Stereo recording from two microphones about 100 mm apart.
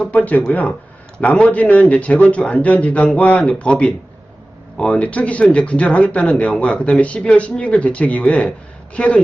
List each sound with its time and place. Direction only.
0.0 s speech: 15° left (ahead or behind)